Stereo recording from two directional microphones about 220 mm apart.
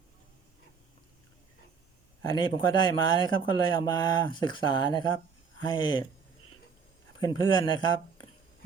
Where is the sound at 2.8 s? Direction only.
20° left (ahead or behind).